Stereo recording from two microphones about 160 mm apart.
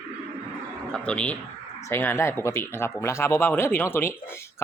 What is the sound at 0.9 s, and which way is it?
Speech, 5° left (ahead or behind).